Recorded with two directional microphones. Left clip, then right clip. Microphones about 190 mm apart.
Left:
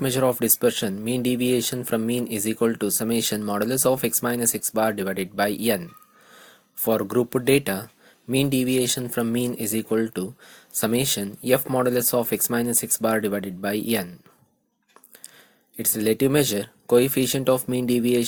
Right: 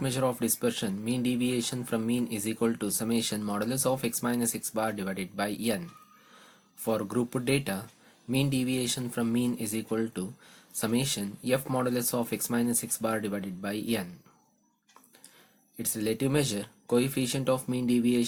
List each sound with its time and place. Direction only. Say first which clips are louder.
0.0 s speech: left 7 dB; 35° left (ahead or behind)
15.8 s speech: left 9 dB; 35° left (ahead or behind)